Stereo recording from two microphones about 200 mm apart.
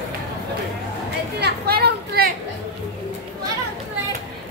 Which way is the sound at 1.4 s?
50° right (ahead or behind).